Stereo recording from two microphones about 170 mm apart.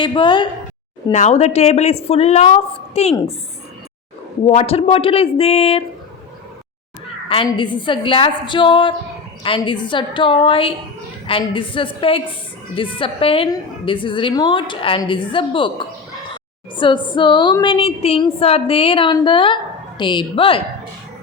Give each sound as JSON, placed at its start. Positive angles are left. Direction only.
{"t": 0.0, "sound": "a woman's voice", "side_deg": 30}
{"t": 1.1, "sound": "a woman's voice", "side_deg": 40}
{"t": 4.4, "sound": "a woman's voice", "side_deg": 35}
{"t": 7.3, "sound": "a woman's voice", "side_deg": 30}